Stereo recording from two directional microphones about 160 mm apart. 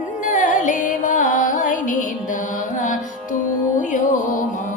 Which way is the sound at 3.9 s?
50° left (ahead or behind).